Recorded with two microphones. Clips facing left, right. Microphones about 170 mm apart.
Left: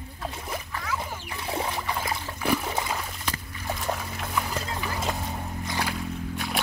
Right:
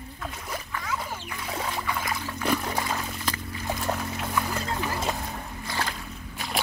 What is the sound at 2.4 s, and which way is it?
Trickle, 5° left (ahead or behind).